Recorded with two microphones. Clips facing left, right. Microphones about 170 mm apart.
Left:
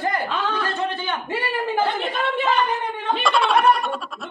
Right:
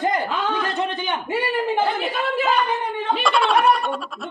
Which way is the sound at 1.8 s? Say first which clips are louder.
Right 1 dB; 5° right (ahead or behind).